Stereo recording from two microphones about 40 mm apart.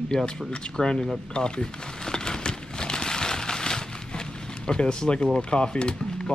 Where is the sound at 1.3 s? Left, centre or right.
Left.